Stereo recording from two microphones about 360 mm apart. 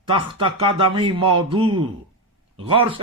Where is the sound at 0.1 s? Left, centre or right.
Centre.